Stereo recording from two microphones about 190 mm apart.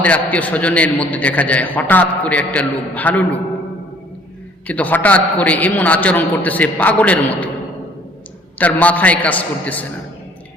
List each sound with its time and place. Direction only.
0.0 s a man's voice: 10° left (ahead or behind)
4.6 s a man's voice: 10° left (ahead or behind)
8.5 s a man's voice: 10° left (ahead or behind)